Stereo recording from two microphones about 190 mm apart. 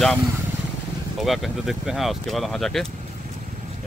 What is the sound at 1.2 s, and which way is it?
Speech, centre (ahead or behind).